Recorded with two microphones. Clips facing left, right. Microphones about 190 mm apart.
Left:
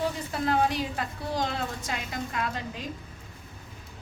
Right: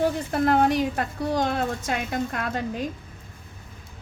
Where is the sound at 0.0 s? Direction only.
50° right (ahead or behind).